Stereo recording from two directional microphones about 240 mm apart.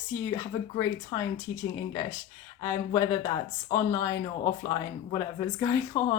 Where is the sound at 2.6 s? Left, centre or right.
Centre.